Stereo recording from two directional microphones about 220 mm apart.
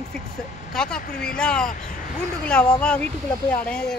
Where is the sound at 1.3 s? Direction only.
5° left (ahead or behind).